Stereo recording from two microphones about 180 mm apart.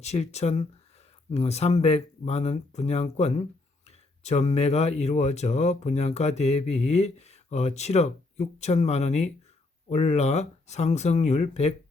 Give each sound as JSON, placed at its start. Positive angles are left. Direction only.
{"t": 0.0, "sound": "speech", "side_deg": 35}